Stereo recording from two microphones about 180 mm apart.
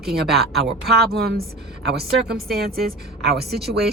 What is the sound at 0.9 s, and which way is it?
Speech, 60° right (ahead or behind).